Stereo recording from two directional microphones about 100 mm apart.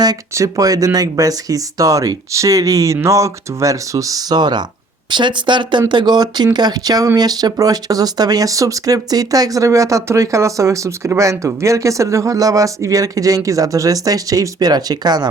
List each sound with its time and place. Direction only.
0.0 s speech: 40° right (ahead or behind)